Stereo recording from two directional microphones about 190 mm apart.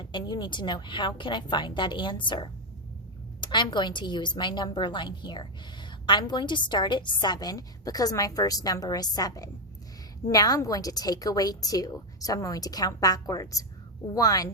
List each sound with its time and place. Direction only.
0.0 s a woman's voice: 25° left (ahead or behind)